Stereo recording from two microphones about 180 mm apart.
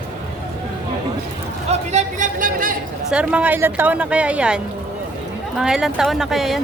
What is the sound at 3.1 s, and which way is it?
A woman's voice, 5° right (ahead or behind).